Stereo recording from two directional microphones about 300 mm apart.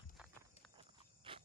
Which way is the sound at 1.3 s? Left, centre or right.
Centre.